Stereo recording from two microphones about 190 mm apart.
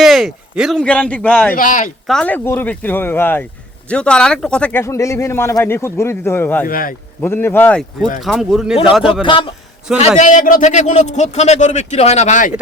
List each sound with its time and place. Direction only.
0.0 s speech: centre (ahead or behind)
1.5 s speech: 45° left (ahead or behind)
2.0 s speech: 5° left (ahead or behind)
6.7 s speech: 50° left (ahead or behind)
7.2 s speech: 10° left (ahead or behind)
9.2 s a man's voice: 25° left (ahead or behind)
10.2 s speech: 40° left (ahead or behind)